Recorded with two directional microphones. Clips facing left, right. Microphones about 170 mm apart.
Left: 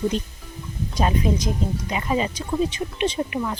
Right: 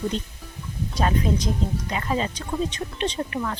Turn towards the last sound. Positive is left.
turn(degrees=10)  # may be behind; listen again after turning